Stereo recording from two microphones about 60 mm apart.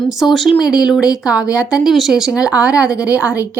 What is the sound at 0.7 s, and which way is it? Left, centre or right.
Speech, centre.